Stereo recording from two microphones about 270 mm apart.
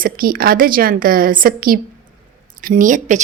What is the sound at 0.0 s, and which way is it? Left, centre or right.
A woman's voice, right.